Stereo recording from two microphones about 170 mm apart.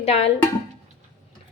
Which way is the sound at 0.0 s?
35° left (ahead or behind).